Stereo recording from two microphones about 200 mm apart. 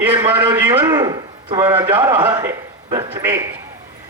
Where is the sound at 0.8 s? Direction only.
20° right (ahead or behind).